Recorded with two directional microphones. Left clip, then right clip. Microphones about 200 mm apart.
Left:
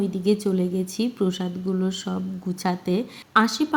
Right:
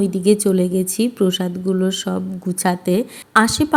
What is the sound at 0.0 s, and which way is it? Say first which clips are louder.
A woman's voice: right 7 dB; 25° right (ahead or behind).